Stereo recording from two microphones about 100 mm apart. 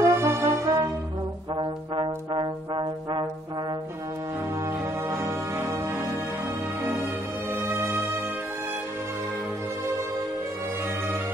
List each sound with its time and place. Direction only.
0.0 s music: 25° right (ahead or behind)
1.6 s brass instrument: 55° right (ahead or behind)
5.1 s music: 30° right (ahead or behind)
7.6 s music: 25° right (ahead or behind)